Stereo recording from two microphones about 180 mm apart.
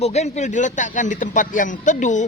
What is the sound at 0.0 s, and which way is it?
A man's voice, 40° left (ahead or behind).